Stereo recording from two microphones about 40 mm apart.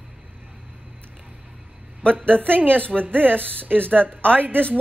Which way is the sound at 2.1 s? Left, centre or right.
Right.